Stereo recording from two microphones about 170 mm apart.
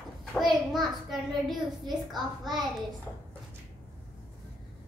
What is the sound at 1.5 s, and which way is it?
A child's voice, centre (ahead or behind).